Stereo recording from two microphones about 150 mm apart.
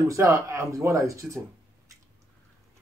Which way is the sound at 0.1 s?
20° right (ahead or behind).